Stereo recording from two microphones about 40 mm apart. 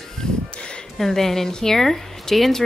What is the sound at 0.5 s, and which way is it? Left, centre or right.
Speech, left.